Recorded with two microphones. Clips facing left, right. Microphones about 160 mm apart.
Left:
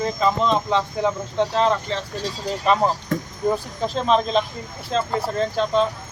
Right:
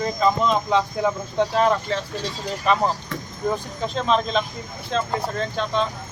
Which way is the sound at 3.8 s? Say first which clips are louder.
Left 2 dB; 5° left (ahead or behind).